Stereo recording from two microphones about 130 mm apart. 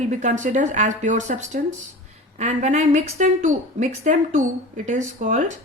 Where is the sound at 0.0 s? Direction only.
70° right (ahead or behind).